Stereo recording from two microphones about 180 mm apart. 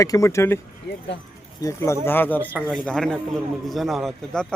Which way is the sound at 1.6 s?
15° left (ahead or behind).